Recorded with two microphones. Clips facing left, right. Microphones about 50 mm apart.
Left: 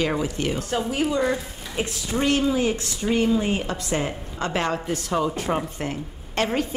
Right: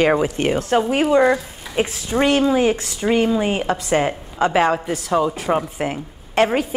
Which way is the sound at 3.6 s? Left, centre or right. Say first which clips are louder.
Right 7 dB; centre.